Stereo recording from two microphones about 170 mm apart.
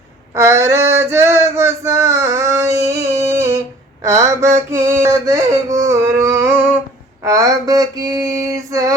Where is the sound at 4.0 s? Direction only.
20° right (ahead or behind).